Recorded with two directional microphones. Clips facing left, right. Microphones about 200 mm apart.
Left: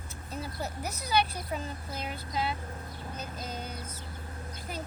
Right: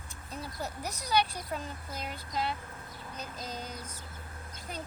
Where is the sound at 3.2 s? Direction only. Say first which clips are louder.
Even; 35° right (ahead or behind).